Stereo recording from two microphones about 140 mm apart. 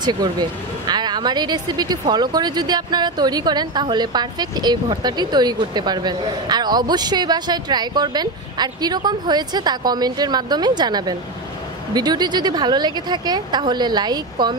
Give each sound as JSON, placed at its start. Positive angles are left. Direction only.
{"t": 0.0, "sound": "a woman's voice", "side_deg": -30}